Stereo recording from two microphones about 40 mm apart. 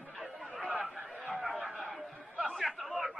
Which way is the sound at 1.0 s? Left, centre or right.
Centre.